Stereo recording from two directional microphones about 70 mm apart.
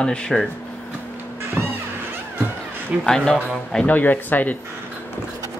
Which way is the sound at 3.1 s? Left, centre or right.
Centre.